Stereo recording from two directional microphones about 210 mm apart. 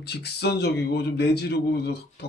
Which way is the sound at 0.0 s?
50° left (ahead or behind).